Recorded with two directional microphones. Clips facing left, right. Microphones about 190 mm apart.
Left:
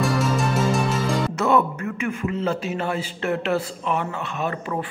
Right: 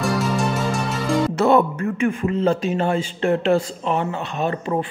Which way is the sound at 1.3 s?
30° right (ahead or behind).